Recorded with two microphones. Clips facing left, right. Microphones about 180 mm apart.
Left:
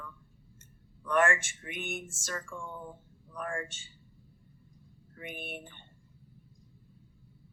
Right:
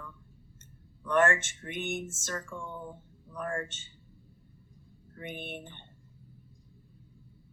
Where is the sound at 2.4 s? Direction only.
20° right (ahead or behind).